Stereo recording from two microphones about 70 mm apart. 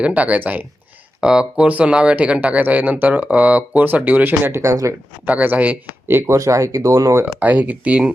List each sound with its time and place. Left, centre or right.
0.0 s speech: centre
1.2 s speech: centre; by 4.5 s right
4.5 s speech: right
5.4 s speech: right
6.1 s speech: right
7.3 s speech: right